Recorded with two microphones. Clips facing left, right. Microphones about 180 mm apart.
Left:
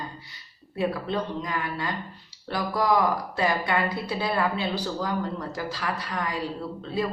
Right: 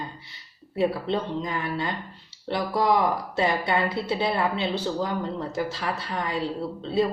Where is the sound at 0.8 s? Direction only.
25° right (ahead or behind).